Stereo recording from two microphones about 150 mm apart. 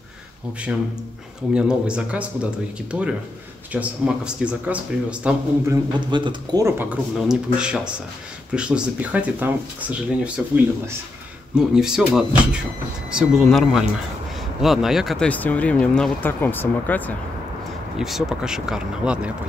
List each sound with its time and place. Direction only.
1.5 s speech: 5° right (ahead or behind)
5.7 s speech: 30° right (ahead or behind)
6.6 s speech: 10° right (ahead or behind)
15.2 s speech: 10° left (ahead or behind)
17.9 s speech: 5° right (ahead or behind)